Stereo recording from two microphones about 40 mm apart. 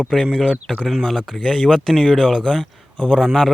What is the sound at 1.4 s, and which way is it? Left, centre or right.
Speech, centre.